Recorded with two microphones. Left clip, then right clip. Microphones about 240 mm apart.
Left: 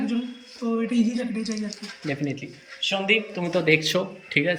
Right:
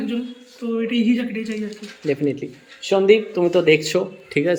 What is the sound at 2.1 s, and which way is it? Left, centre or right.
Speech, centre.